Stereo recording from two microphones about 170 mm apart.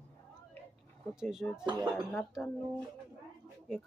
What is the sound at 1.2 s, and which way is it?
Speech, 5° right (ahead or behind).